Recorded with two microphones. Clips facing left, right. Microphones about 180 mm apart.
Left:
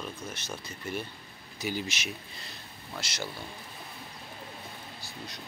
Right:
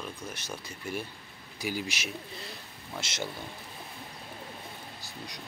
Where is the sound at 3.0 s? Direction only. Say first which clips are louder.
Right 2 dB; 25° right (ahead or behind).